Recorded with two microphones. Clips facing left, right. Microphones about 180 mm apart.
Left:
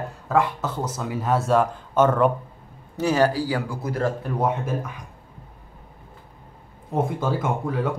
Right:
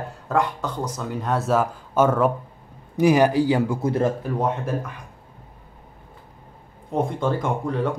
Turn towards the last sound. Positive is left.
turn(degrees=5)  # may be behind; listen again after turning